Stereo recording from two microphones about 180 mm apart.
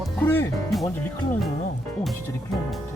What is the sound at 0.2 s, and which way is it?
Music, 10° left (ahead or behind).